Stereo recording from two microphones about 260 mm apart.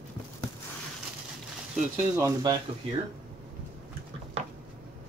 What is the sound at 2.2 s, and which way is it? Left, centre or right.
Speech, centre.